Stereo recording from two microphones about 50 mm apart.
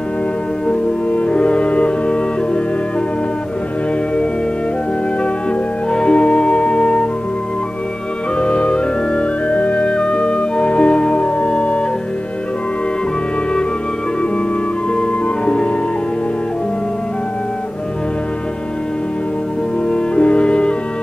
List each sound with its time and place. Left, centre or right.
0.7 s music: left
5.9 s music: centre
8.4 s music: left
15.4 s music: left
19.9 s music: left